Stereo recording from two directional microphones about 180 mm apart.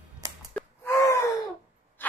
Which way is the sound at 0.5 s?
15° left (ahead or behind).